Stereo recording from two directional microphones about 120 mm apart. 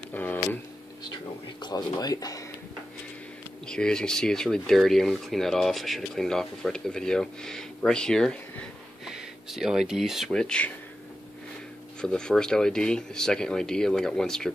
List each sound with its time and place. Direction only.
0.1 s a sound: 15° left (ahead or behind)
1.6 s speech: 35° left (ahead or behind)
3.6 s speech: 5° left (ahead or behind)
9.0 s speech: 5° right (ahead or behind)
12.0 s speech: 5° left (ahead or behind)